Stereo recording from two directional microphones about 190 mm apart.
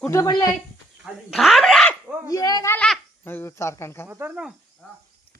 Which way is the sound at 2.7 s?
5° left (ahead or behind).